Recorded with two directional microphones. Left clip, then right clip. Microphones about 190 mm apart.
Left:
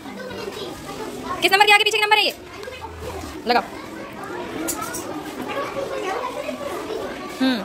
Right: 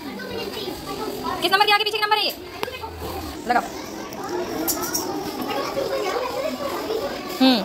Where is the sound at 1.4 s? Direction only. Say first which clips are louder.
Left 4 dB; 30° left (ahead or behind).